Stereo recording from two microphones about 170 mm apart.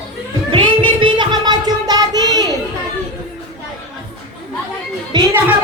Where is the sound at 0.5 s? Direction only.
30° right (ahead or behind).